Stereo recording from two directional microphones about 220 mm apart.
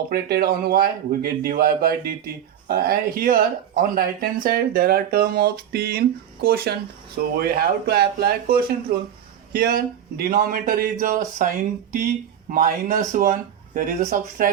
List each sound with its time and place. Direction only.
0.1 s speech: 45° right (ahead or behind)